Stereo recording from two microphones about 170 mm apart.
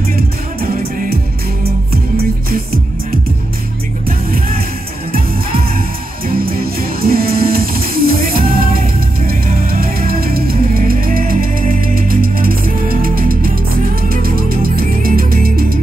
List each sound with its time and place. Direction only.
2.1 s music: 60° right (ahead or behind)
6.3 s music: 60° right (ahead or behind)